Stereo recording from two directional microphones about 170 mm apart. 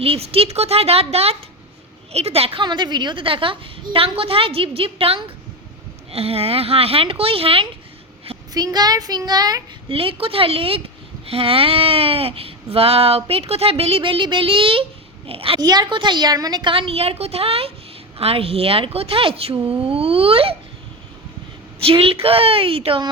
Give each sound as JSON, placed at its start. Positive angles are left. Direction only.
{"t": 0.0, "sound": "a woman's voice", "side_deg": -35}
{"t": 21.8, "sound": "speech", "side_deg": -35}